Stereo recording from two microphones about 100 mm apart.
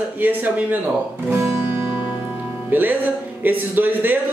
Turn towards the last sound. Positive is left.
turn(degrees=-20)  # may be behind; listen again after turning